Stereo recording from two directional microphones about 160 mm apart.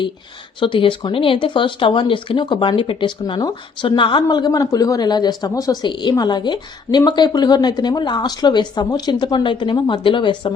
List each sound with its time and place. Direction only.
0.6 s speech: 30° left (ahead or behind)